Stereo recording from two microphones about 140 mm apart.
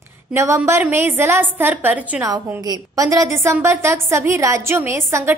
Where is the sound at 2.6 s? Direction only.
25° right (ahead or behind).